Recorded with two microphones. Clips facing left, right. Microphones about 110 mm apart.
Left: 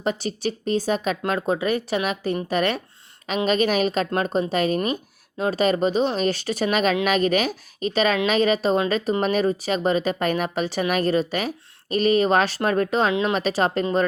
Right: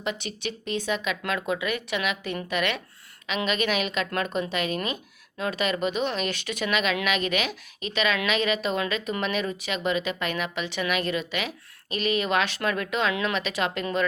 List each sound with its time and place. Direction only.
0.0 s speech: 40° left (ahead or behind)